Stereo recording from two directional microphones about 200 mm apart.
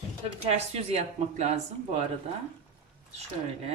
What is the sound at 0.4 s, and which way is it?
Speech, 30° right (ahead or behind).